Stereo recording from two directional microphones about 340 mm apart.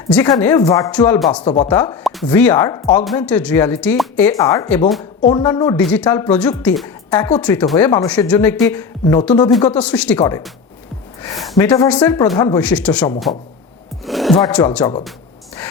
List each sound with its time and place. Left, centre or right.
0.3 s speech: centre
1.5 s speech: centre
1.7 s speech: centre
5.2 s speech: centre
14.0 s music: centre
14.3 s speech: centre